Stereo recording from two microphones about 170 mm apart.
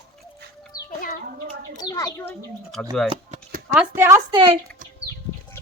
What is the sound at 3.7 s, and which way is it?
Speech, 15° right (ahead or behind).